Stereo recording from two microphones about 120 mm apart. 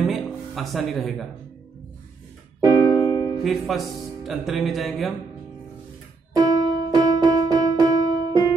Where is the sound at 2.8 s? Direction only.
30° left (ahead or behind).